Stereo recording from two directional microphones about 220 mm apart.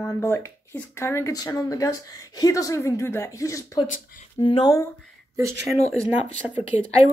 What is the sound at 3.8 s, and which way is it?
Speech, 35° left (ahead or behind).